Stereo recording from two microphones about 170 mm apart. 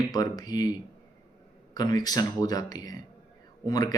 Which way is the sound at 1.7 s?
25° left (ahead or behind).